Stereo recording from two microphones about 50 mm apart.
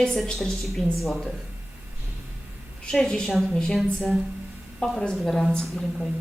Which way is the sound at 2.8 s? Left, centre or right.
Centre.